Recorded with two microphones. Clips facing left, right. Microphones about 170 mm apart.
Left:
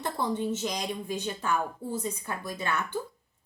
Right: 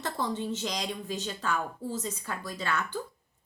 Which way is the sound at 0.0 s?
10° left (ahead or behind).